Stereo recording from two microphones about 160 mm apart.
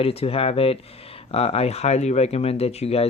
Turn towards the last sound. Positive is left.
turn(degrees=40)  # may be behind; listen again after turning